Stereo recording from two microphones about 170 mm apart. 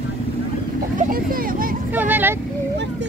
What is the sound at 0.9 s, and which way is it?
Speech, 55° right (ahead or behind).